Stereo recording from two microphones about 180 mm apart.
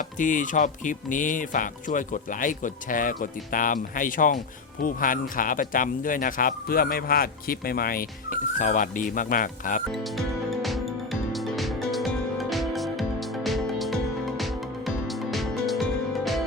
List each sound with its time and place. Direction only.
0.0 s speech: 45° left (ahead or behind)
8.5 s speech: 45° left (ahead or behind)
9.9 s music: centre (ahead or behind)